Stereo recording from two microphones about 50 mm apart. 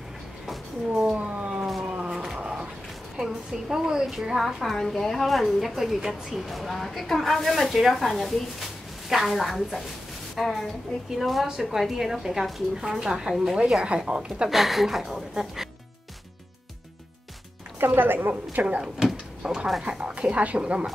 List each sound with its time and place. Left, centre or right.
0.5 s a sound: centre
1.1 s a sound: right
3.2 s a woman's voice: centre
14.5 s a woman's voice: centre
17.7 s a woman's voice: right
18.5 s speech: right
19.4 s a woman's voice: centre